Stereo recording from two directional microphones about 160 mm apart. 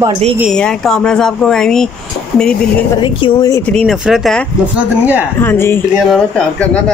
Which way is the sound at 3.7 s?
Centre (ahead or behind).